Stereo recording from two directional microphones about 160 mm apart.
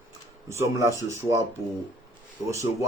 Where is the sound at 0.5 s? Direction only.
15° right (ahead or behind).